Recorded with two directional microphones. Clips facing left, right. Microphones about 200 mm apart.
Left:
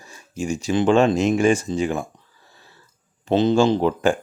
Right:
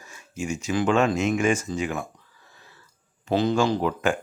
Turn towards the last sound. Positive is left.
turn(degrees=30)  # may be behind; listen again after turning